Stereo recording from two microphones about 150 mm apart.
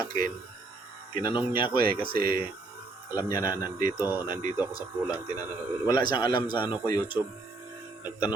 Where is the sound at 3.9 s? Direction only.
15° right (ahead or behind).